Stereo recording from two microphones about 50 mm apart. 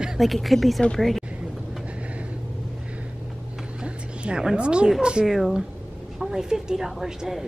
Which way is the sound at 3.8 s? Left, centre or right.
Centre.